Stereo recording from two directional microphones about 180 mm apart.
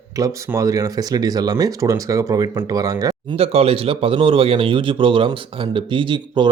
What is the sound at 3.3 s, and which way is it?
Speech, 35° right (ahead or behind).